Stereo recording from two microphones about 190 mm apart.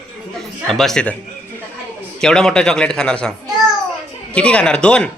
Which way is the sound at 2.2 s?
5° left (ahead or behind).